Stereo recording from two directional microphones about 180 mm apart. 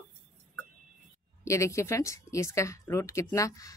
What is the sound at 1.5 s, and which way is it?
A woman's voice, 15° left (ahead or behind).